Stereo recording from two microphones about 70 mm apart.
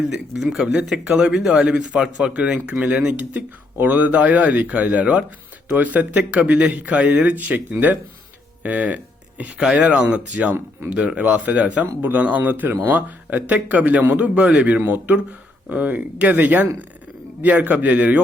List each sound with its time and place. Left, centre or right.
0.3 s a man's voice: centre